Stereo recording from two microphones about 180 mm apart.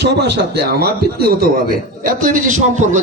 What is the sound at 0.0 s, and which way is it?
Speech, 70° right (ahead or behind).